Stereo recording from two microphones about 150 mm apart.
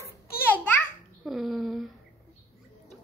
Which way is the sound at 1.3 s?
Centre (ahead or behind).